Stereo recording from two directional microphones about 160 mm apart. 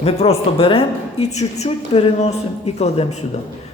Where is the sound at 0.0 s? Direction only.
40° left (ahead or behind).